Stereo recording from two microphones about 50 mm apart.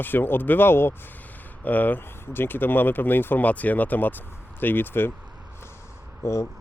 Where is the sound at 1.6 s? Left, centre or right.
Left.